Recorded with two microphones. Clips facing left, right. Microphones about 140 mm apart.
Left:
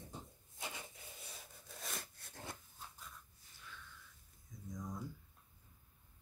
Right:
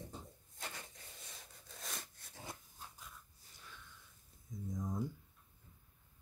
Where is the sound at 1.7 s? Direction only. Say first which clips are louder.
Left 1 dB; centre (ahead or behind).